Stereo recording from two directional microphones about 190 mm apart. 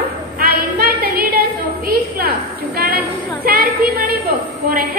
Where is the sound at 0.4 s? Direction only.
50° right (ahead or behind).